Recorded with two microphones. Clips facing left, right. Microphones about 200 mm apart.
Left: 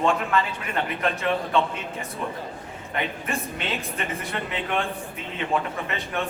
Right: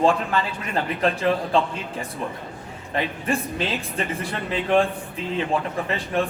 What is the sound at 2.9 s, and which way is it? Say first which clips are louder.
A woman's voice: right 4 dB; 30° right (ahead or behind).